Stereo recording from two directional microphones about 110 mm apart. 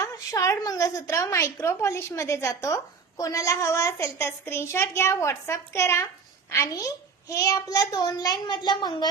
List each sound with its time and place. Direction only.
0.0 s a woman's voice: 30° left (ahead or behind)